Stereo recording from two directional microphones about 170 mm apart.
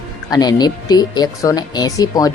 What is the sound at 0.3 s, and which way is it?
Speech, 25° left (ahead or behind).